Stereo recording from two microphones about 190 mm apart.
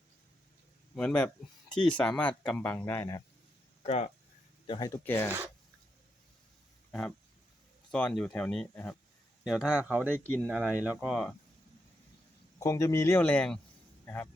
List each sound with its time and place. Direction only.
0.9 s speech: 5° left (ahead or behind)
3.8 s speech: 35° left (ahead or behind)
4.6 s speech: 20° left (ahead or behind)
7.9 s speech: 5° left (ahead or behind)
12.5 s speech: 15° left (ahead or behind)